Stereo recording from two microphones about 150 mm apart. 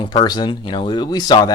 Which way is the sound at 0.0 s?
30° left (ahead or behind).